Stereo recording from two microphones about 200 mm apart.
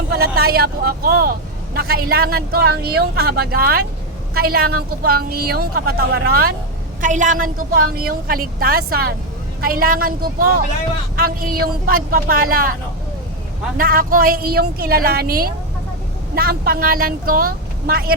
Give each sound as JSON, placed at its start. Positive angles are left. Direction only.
{"t": 0.1, "sound": "a woman's voice", "side_deg": -50}
{"t": 7.0, "sound": "a woman's voice", "side_deg": -40}
{"t": 13.7, "sound": "a woman's voice", "side_deg": -45}